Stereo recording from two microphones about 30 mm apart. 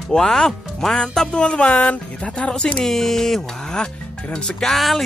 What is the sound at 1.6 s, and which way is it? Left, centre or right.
Speech, left.